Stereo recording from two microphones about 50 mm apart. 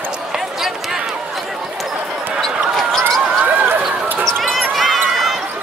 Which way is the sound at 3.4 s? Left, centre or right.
Right.